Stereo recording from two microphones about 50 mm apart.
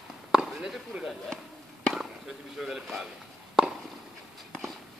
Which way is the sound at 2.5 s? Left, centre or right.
Centre.